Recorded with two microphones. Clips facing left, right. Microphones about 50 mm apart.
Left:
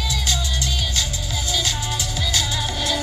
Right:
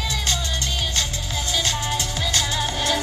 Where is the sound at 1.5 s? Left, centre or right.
Right.